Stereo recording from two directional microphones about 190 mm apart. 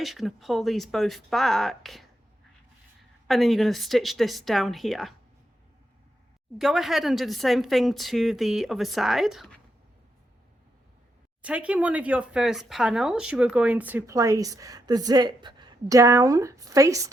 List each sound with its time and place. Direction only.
0.0 s a woman's voice: centre (ahead or behind)
3.2 s a woman's voice: centre (ahead or behind)
6.6 s a woman's voice: centre (ahead or behind)
11.4 s speech: 5° right (ahead or behind)